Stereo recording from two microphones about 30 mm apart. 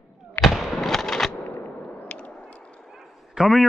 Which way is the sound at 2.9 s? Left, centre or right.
Centre.